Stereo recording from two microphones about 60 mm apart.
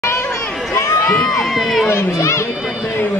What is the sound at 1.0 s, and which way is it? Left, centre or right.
Crowd, centre.